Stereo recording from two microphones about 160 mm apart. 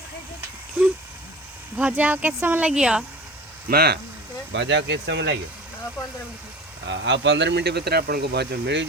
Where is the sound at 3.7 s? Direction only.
80° right.